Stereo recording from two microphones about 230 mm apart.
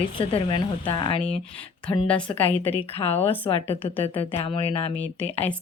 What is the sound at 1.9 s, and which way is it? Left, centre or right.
Speech, centre.